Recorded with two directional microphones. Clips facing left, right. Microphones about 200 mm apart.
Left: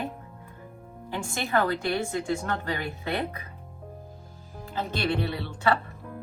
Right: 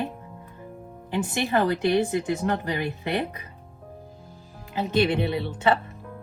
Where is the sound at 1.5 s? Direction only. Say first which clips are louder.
Right 3 dB; 20° right (ahead or behind).